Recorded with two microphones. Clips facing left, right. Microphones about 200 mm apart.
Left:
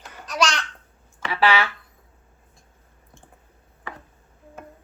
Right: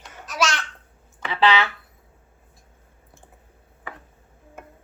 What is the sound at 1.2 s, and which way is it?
Speech, 20° right (ahead or behind).